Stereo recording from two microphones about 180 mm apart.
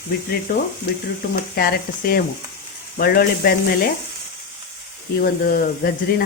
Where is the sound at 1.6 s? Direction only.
55° left (ahead or behind).